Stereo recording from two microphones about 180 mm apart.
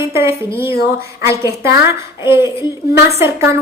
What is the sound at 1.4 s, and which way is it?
A woman's voice, 15° right (ahead or behind).